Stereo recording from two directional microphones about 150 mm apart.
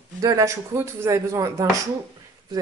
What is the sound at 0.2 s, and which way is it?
Speech, 20° right (ahead or behind).